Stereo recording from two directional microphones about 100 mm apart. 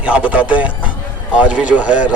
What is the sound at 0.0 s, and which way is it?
Speech, 10° right (ahead or behind).